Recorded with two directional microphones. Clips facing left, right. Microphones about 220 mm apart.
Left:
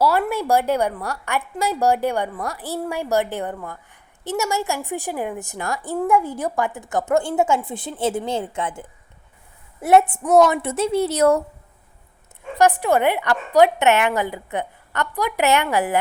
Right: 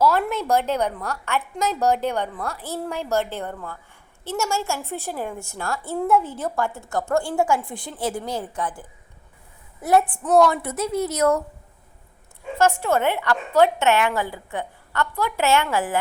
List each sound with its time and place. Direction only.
0.0 s a woman's voice: 10° left (ahead or behind); by 11.4 s 30° left (ahead or behind)
12.5 s a woman's voice: 15° left (ahead or behind)